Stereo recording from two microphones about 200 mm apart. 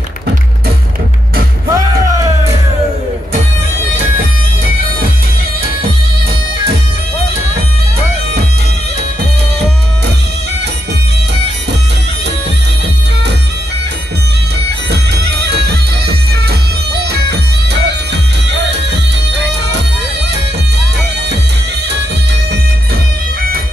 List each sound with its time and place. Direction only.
1.7 s music: 15° right (ahead or behind)
14.9 s music: 55° right (ahead or behind)